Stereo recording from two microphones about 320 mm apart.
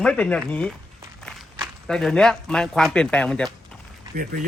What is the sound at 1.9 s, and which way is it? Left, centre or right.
Speech, centre.